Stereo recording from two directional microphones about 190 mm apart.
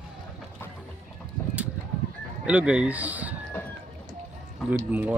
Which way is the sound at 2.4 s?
5° right (ahead or behind).